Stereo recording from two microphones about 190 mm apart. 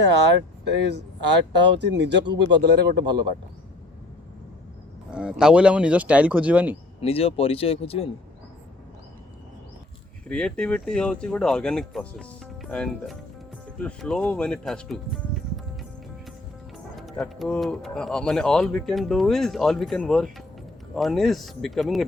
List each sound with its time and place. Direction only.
0.0 s speech: 65° right (ahead or behind)
3.0 s speech: 25° right (ahead or behind)
5.1 s speech: 5° right (ahead or behind)
7.0 s speech: 30° left (ahead or behind)
10.2 s speech: 5° left (ahead or behind)
16.7 s speech: centre (ahead or behind)